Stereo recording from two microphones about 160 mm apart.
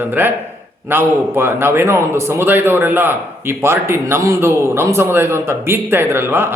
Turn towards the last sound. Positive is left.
turn(degrees=-15)  # may be behind; listen again after turning